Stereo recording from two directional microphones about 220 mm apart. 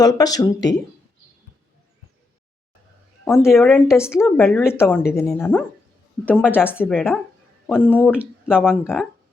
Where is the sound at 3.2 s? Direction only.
10° left (ahead or behind).